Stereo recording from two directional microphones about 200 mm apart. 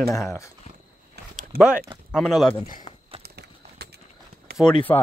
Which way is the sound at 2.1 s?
Centre (ahead or behind).